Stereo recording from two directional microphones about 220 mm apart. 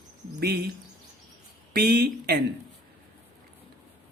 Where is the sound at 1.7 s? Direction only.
45° right (ahead or behind).